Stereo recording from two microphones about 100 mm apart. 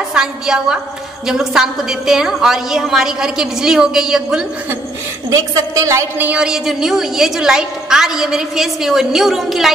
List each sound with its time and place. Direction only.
0.1 s a woman's voice: 5° right (ahead or behind)
5.3 s a woman's voice: 35° right (ahead or behind)
6.1 s a woman's voice: 15° right (ahead or behind)